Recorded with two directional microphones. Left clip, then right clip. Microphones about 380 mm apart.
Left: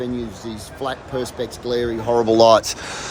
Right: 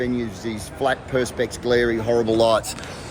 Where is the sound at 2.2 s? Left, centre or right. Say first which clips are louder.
Left 8 dB; left.